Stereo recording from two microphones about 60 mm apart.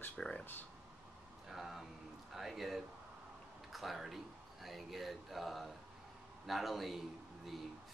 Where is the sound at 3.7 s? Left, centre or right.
Centre.